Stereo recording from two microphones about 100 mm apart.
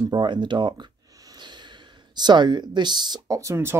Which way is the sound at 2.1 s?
45° right (ahead or behind).